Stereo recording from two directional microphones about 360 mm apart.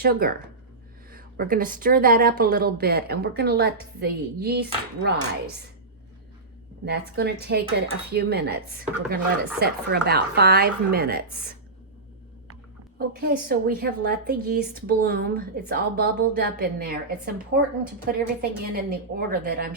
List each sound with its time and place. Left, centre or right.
0.0 s a woman's voice: right
6.8 s a woman's voice: right
13.0 s a woman's voice: right